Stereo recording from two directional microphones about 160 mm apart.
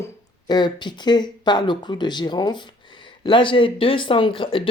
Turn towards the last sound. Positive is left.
turn(degrees=30)  # may be behind; listen again after turning